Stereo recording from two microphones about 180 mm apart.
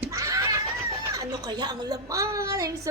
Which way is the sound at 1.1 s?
20° right (ahead or behind).